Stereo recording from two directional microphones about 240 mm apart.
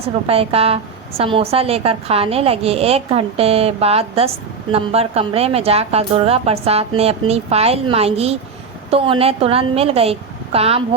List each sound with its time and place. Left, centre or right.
0.3 s a woman's voice: right